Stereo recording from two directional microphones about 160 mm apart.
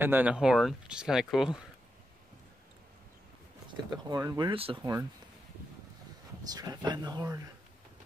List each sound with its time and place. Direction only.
0.0 s speech: 10° right (ahead or behind)
3.9 s speech: 20° right (ahead or behind)
6.5 s speech: 25° right (ahead or behind)